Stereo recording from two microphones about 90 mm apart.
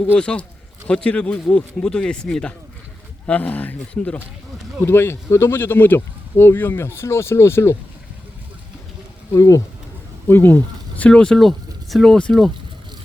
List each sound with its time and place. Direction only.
0.0 s speech: 10° left (ahead or behind)
4.9 s speech: 25° left (ahead or behind)
9.3 s speech: 35° left (ahead or behind)
10.2 s speech: 25° left (ahead or behind); by 12.5 s 10° left (ahead or behind)